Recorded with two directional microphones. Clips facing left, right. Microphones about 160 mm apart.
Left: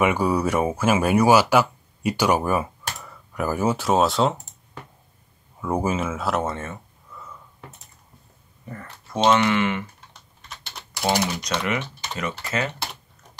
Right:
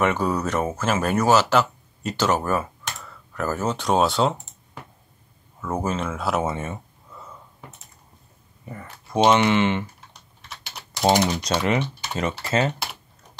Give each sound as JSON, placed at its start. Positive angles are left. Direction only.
{"t": 0.0, "sound": "speech", "side_deg": 10}
{"t": 5.6, "sound": "speech", "side_deg": 10}
{"t": 6.5, "sound": "speech", "side_deg": -20}
{"t": 8.6, "sound": "speech", "side_deg": -10}
{"t": 11.4, "sound": "speech", "side_deg": -30}